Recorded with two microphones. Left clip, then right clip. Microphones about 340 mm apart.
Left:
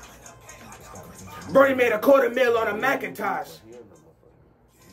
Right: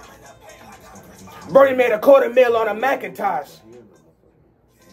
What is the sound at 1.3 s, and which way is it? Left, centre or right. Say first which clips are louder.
Speech: right 5 dB; centre.